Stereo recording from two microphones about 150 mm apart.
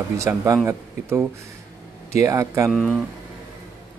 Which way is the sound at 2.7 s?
Centre (ahead or behind).